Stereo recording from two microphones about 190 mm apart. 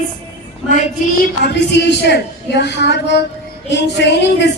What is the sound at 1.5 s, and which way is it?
A man's voice, 65° left (ahead or behind).